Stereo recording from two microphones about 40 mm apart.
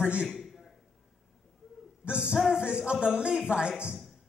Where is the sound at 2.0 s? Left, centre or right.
Right.